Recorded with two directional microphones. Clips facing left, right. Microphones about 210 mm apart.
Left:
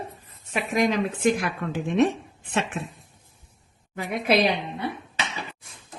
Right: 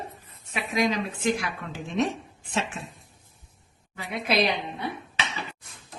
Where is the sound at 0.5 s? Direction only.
50° left (ahead or behind).